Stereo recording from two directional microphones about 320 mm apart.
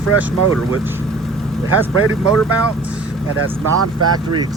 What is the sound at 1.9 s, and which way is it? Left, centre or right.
Speech, right.